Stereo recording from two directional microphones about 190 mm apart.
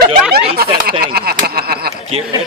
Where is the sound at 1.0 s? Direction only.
55° right (ahead or behind).